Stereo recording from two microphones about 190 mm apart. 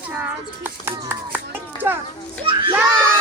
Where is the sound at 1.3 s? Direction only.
10° right (ahead or behind).